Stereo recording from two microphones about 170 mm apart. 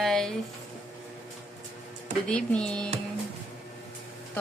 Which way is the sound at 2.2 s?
5° left (ahead or behind).